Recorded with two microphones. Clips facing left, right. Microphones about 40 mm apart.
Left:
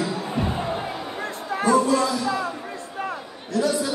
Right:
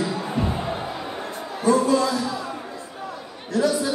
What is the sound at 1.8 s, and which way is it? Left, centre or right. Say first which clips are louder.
Music: right 1 dB; left.